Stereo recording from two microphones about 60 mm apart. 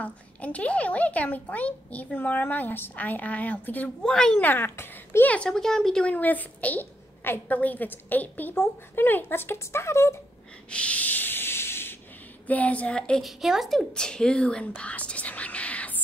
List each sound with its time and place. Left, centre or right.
0.0 s speech: left
4.0 s speech: centre
4.4 s a woman's voice: left
5.2 s speech: left
5.5 s speech: centre
6.1 s a woman's voice: left
10.7 s sanding: left
12.4 s speech: left
13.2 s speech: centre
13.7 s speech: centre